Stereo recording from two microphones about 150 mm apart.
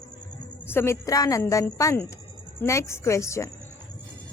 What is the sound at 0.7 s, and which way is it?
A woman's voice, 15° left (ahead or behind).